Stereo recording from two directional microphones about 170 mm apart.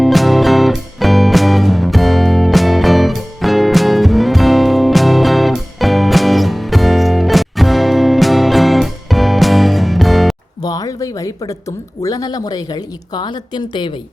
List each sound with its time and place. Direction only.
0.0 s music: centre (ahead or behind)
10.6 s a sound: 20° left (ahead or behind)
12.0 s speech: 20° left (ahead or behind)